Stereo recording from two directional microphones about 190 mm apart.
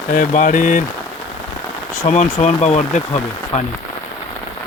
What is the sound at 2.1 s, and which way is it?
Speech, 35° left (ahead or behind).